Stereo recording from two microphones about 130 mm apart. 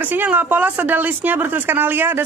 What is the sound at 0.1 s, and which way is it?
Speech, 15° right (ahead or behind).